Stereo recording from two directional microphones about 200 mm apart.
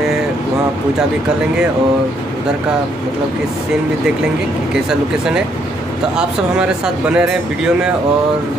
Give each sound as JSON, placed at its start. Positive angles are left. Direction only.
{"t": 6.1, "sound": "speech", "side_deg": -5}